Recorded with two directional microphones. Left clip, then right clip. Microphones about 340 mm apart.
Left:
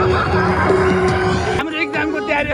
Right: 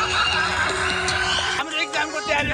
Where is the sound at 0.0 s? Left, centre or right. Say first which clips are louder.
Left 4 dB; centre.